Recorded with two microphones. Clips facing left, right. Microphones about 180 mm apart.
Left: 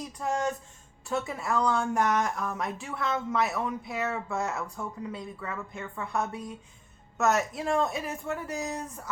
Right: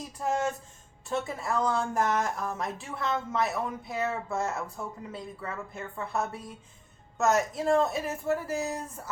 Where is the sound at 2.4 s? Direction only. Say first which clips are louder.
Even; 35° right (ahead or behind).